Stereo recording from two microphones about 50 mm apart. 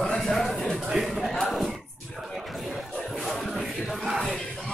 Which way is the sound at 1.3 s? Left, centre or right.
Centre.